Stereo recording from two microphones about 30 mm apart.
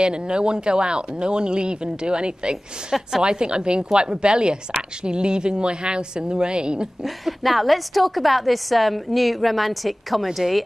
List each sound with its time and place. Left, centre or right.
0.0 s speech: right
7.0 s a woman's voice: centre